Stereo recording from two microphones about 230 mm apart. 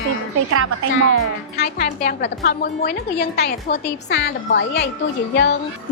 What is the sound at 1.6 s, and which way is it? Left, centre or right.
A woman's voice, left.